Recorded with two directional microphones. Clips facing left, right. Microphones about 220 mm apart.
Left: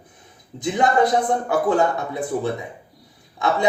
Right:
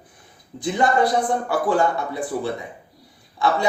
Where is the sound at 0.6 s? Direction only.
20° left (ahead or behind).